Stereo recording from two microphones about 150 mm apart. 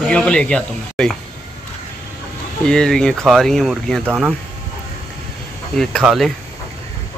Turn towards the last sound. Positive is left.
turn(degrees=0)  # may be behind; listen again after turning